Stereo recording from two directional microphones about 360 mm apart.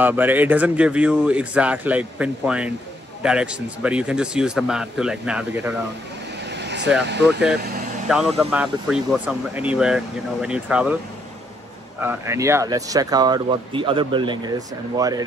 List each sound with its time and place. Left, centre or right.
0.0 s speech: centre
6.5 s vehicle: right
7.1 s speech: right
8.1 s speech: centre
12.0 s speech: centre